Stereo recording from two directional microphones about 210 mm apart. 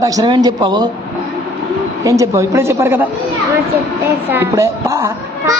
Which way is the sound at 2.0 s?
15° right (ahead or behind).